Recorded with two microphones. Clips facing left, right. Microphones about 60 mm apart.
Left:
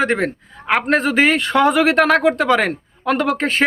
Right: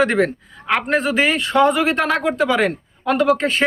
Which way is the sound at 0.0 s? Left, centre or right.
Left.